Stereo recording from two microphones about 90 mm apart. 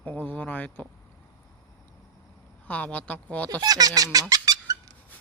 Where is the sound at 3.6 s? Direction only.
45° right (ahead or behind).